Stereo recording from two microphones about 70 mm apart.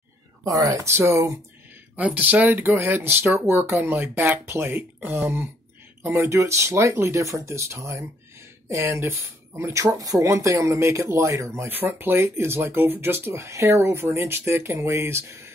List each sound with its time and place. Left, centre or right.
0.4 s speech: right
0.8 s speech: right
2.0 s speech: right
9.8 s speech: right
11.7 s speech: right